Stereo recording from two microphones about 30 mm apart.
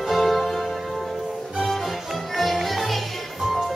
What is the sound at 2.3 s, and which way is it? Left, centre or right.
Music, centre.